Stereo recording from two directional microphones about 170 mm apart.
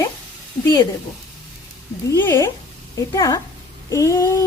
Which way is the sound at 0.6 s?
25° left (ahead or behind).